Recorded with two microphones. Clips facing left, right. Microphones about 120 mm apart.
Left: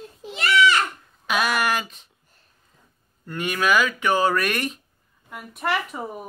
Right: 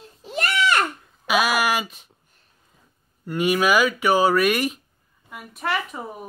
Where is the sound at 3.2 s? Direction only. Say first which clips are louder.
Right 4 dB; 10° right (ahead or behind).